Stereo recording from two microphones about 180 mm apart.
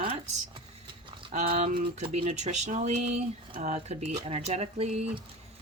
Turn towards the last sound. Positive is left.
turn(degrees=-35)  # may be behind; listen again after turning